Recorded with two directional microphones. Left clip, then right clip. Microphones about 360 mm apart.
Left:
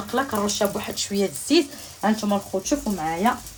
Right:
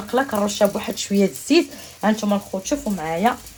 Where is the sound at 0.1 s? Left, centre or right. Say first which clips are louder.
Right 4 dB; centre.